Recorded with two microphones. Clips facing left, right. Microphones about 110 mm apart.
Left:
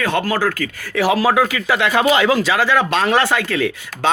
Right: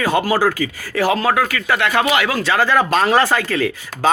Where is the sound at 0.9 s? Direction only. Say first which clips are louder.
Left 1 dB; 5° left (ahead or behind).